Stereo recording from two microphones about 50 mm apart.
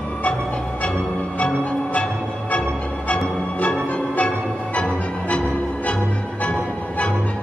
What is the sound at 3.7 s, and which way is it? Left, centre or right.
Music, left.